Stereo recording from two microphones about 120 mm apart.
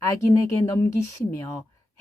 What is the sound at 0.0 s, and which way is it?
Speech, 25° left (ahead or behind).